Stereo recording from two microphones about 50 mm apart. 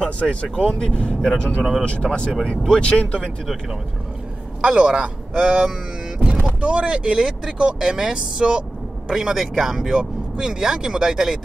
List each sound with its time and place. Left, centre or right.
0.0 s speech: left
0.7 s speech: centre
4.6 s a man's voice: centre